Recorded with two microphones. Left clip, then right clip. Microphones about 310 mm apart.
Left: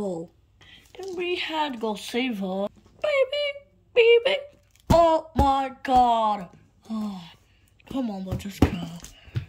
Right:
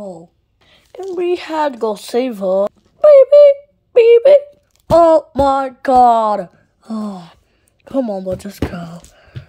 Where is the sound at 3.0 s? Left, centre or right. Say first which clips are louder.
Right 18 dB; centre.